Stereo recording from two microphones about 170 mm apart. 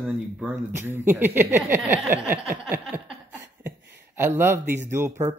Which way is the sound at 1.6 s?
5° right (ahead or behind).